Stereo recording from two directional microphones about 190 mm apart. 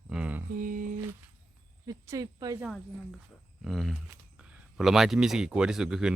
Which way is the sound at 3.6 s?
Centre (ahead or behind).